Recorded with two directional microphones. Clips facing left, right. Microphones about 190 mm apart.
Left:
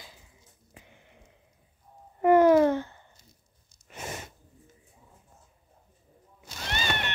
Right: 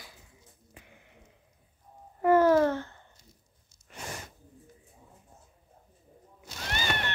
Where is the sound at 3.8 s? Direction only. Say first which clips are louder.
Left 3 dB; 20° left (ahead or behind).